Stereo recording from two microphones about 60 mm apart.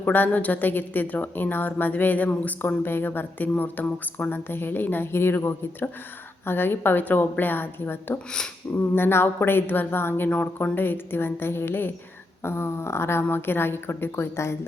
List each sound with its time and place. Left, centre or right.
0.0 s speech: left
8.7 s a sound: centre
9.0 s speech: left
10.2 s speech: left